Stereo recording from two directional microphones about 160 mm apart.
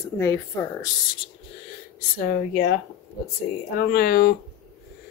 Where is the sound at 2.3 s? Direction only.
70° left (ahead or behind).